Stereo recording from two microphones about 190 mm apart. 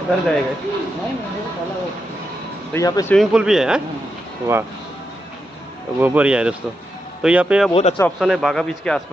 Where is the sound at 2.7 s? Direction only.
15° left (ahead or behind).